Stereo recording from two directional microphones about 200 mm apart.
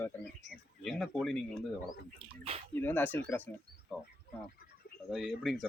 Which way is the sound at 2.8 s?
10° left (ahead or behind).